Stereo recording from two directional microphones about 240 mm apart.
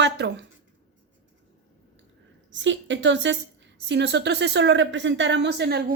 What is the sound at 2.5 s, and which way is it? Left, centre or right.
Speech, right.